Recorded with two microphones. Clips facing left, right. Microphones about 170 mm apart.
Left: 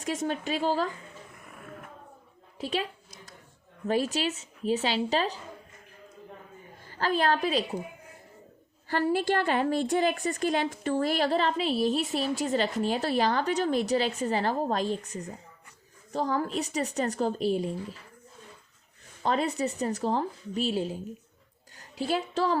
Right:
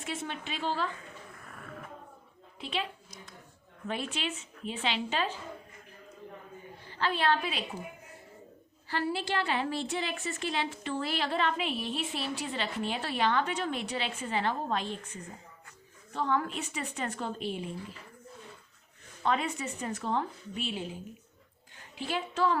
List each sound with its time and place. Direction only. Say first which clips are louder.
0.0 s speech: left 7 dB; 45° left (ahead or behind)
1.4 s a sound: left 1 dB; 10° left (ahead or behind)
2.6 s a woman's voice: left 5 dB; 45° left (ahead or behind)
3.8 s a woman's voice: left 8 dB; 40° left (ahead or behind)
6.8 s a woman's voice: left 3 dB; 40° left (ahead or behind)
8.9 s a woman's voice: left 6 dB; 45° left (ahead or behind)
19.2 s a woman's voice: left 4 dB; 35° left (ahead or behind)